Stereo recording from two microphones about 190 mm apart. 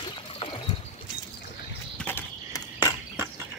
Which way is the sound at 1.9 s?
10° left (ahead or behind).